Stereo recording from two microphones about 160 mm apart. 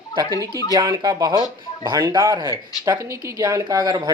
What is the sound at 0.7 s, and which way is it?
Speech, 25° right (ahead or behind).